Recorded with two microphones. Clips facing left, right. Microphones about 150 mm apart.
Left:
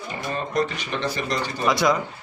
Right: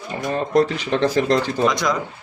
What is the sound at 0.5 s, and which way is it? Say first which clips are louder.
Speech: right 9 dB; 90° right.